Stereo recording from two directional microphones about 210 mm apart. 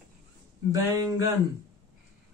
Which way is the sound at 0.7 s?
15° right (ahead or behind).